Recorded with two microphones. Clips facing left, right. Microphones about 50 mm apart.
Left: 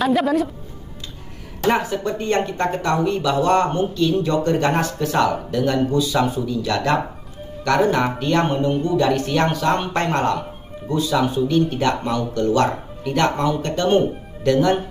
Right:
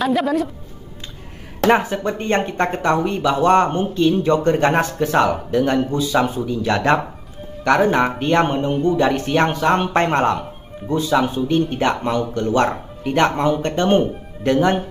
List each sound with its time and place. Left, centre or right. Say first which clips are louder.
0.0 s speech: even; centre
1.7 s speech: right 2 dB; right